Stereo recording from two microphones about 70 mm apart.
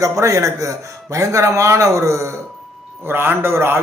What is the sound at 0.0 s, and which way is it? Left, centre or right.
Speech, right.